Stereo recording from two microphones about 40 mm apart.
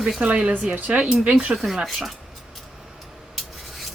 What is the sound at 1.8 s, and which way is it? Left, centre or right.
Speech, centre.